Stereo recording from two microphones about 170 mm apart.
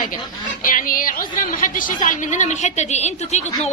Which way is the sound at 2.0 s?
45° left (ahead or behind).